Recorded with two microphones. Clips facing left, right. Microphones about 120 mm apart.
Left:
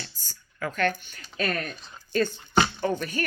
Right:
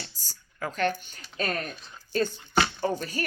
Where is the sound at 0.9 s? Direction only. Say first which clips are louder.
Left 1 dB; 40° right (ahead or behind).